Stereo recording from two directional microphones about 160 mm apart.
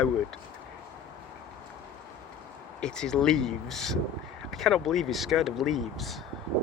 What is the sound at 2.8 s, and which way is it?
Speech, 5° left (ahead or behind).